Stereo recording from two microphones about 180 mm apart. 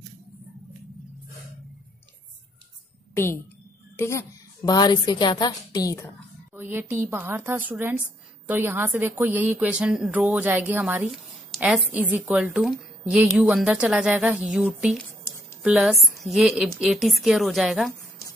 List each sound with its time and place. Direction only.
3.9 s a woman's voice: 15° left (ahead or behind)
6.5 s a woman's voice: 10° right (ahead or behind)
15.2 s a sound: 15° left (ahead or behind)
15.6 s a woman's voice: 5° right (ahead or behind)